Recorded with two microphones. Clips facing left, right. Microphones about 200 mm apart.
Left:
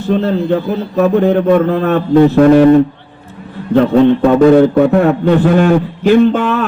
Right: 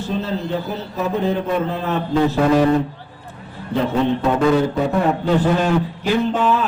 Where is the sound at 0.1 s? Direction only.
60° left (ahead or behind).